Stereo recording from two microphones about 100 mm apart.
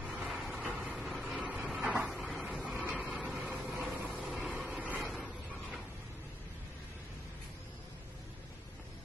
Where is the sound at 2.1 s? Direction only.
Centre (ahead or behind).